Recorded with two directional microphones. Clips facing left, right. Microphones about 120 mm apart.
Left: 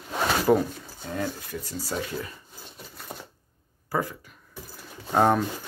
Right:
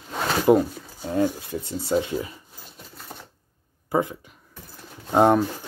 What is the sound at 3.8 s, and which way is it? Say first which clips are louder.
Speech: right 5 dB; 20° right (ahead or behind).